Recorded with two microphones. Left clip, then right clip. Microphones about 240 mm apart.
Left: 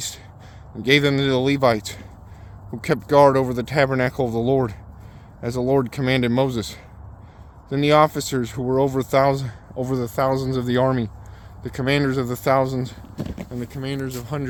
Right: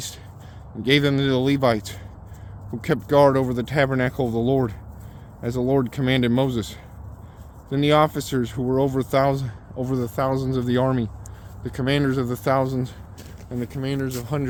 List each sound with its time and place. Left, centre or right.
0.8 s speech: left
13.5 s speech: centre